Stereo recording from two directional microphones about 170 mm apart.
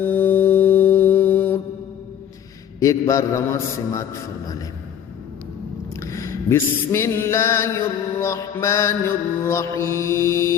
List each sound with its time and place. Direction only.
0.0 s mantra: 10° left (ahead or behind)
2.8 s a man's voice: 20° left (ahead or behind)
6.0 s a sound: 20° left (ahead or behind)